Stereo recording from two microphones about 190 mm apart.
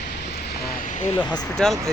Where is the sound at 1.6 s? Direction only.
Centre (ahead or behind).